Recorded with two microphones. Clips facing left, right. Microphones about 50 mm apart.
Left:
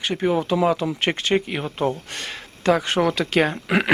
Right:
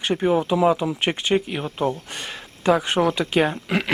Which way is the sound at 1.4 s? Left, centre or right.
Centre.